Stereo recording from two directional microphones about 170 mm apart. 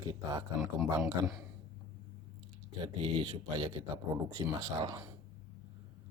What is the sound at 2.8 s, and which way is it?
Speech, 30° right (ahead or behind).